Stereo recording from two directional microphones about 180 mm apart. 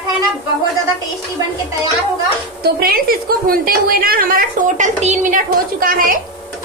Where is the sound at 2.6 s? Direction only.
55° right (ahead or behind).